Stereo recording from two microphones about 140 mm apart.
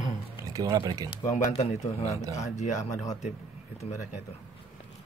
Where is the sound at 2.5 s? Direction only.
55° left (ahead or behind).